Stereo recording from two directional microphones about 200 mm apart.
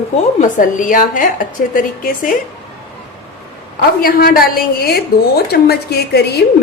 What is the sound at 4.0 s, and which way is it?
A woman's voice, 50° left (ahead or behind).